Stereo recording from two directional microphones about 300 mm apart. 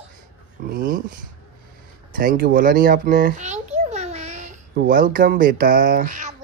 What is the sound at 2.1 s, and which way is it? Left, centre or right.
A child's voice, right.